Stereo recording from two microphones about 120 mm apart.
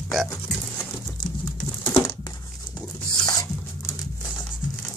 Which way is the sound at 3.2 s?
30° left (ahead or behind).